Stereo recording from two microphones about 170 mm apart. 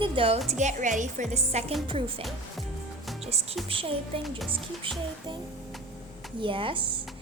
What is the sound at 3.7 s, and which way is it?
Speech, 35° right (ahead or behind).